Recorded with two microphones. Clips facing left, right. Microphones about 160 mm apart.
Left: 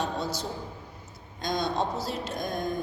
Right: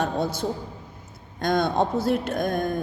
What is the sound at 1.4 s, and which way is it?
A woman's voice, 55° right (ahead or behind).